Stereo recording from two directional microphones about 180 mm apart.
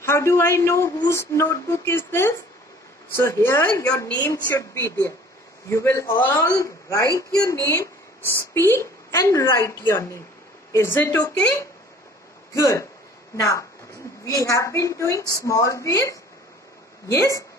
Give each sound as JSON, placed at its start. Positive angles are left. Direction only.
{"t": 0.0, "sound": "a woman's voice", "side_deg": 15}
{"t": 12.5, "sound": "a woman's voice", "side_deg": 15}